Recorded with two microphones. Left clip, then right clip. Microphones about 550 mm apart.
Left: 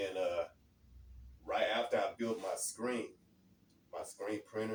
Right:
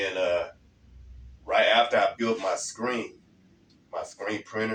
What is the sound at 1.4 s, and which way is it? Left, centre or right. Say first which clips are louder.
A man's voice: right 13 dB; left.